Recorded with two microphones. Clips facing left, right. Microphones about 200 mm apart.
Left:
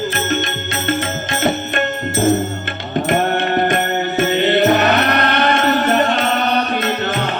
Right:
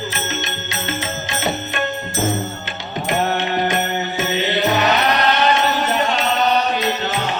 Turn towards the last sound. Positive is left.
turn(degrees=55)  # may be behind; listen again after turning